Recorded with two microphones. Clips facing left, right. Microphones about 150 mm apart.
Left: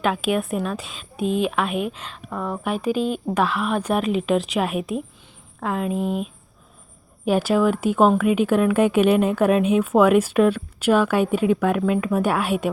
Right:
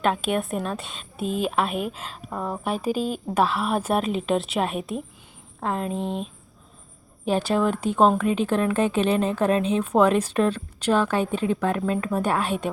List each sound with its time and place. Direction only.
0.0 s a woman's voice: centre (ahead or behind)
2.4 s speech: 35° right (ahead or behind)
3.3 s a woman's voice: centre (ahead or behind)